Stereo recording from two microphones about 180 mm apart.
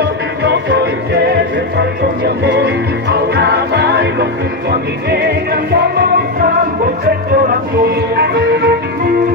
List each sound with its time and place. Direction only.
0.4 s music: 70° right (ahead or behind)
1.8 s music: 70° right (ahead or behind)
8.2 s music: 65° right (ahead or behind)